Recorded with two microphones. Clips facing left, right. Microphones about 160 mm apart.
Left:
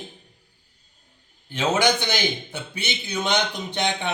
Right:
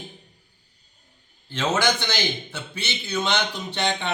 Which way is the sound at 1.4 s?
15° left (ahead or behind).